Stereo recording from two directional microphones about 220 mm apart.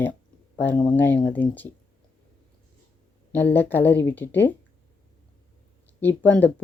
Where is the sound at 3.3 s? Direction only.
10° left (ahead or behind).